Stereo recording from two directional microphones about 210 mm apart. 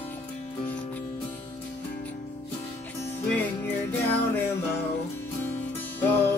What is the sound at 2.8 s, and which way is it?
Music, 10° left (ahead or behind).